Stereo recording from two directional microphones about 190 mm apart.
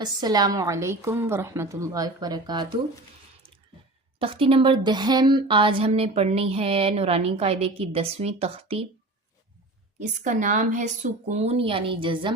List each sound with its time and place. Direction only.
0.2 s a woman's voice: 20° right (ahead or behind)
4.2 s a woman's voice: 30° right (ahead or behind)
10.0 s a woman's voice: 40° right (ahead or behind)